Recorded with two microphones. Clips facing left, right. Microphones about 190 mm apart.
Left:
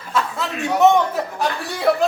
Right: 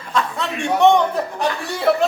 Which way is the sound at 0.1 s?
5° left (ahead or behind).